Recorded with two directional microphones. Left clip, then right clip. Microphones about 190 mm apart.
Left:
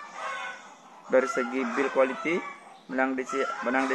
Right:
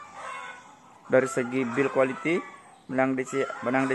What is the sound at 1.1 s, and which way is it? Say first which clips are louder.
A man's voice: right 1 dB; 50° right (ahead or behind).